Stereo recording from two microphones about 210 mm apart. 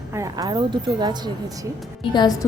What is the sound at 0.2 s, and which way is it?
Speech, 20° right (ahead or behind).